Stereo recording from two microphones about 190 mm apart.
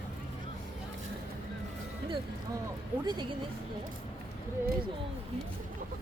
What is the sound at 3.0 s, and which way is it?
Speech, 25° right (ahead or behind).